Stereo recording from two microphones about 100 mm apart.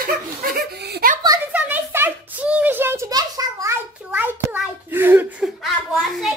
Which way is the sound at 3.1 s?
40° right (ahead or behind).